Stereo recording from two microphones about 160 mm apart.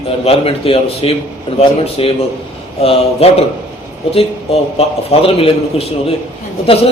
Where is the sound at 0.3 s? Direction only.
35° left (ahead or behind).